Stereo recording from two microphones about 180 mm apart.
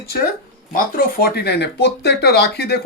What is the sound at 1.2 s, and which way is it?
Speech, 65° left (ahead or behind).